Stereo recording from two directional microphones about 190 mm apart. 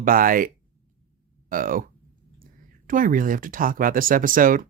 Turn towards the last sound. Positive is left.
turn(degrees=-45)  # may be behind; listen again after turning